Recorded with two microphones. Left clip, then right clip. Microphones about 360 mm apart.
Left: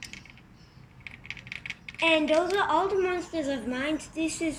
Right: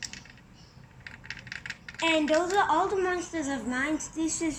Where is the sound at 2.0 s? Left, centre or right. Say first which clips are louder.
Left 2 dB; centre.